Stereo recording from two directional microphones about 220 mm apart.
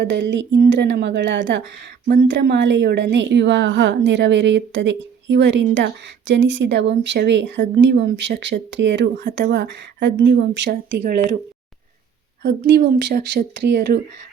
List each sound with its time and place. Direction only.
0.0 s a woman's voice: 50° right (ahead or behind)
10.7 s speech: 40° right (ahead or behind)
12.4 s a woman's voice: 50° right (ahead or behind)